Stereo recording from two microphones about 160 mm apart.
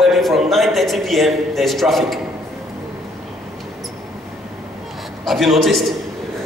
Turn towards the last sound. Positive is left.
turn(degrees=0)  # may be behind; listen again after turning